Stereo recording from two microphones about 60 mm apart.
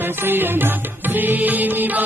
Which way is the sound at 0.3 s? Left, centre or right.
Right.